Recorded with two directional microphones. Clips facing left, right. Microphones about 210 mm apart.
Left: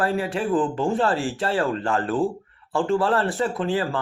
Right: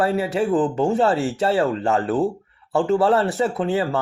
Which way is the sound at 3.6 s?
25° right (ahead or behind).